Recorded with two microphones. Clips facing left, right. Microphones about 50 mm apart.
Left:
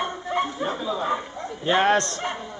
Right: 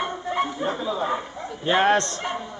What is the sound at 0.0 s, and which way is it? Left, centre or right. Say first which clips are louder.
Bow-wow: even; centre.